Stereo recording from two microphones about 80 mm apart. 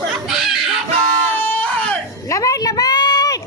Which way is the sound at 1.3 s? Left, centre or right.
Left.